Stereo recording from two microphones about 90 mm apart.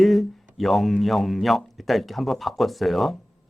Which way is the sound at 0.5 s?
Centre (ahead or behind).